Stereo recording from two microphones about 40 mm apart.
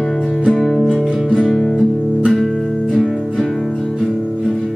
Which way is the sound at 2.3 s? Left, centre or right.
Centre.